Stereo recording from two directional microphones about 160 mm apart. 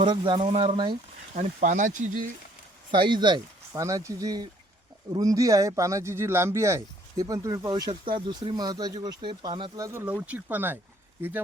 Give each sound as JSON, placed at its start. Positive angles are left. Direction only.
{"t": 0.0, "sound": "speech", "side_deg": -30}
{"t": 1.3, "sound": "speech", "side_deg": -45}
{"t": 2.9, "sound": "speech", "side_deg": -30}
{"t": 7.7, "sound": "speech", "side_deg": -30}